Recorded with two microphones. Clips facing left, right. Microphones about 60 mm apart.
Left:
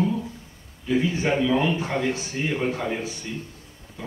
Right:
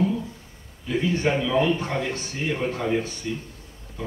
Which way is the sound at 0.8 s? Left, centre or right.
Centre.